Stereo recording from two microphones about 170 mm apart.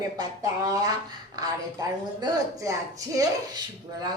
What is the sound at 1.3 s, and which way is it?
Speech, 20° right (ahead or behind).